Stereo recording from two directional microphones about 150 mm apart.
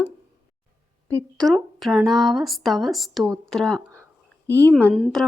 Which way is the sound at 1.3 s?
Centre (ahead or behind).